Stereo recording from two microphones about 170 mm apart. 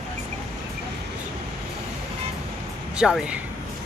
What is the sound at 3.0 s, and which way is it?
Speech, 5° right (ahead or behind).